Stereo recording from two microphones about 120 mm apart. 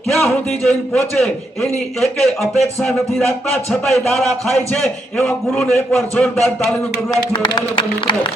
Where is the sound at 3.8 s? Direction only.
20° left (ahead or behind).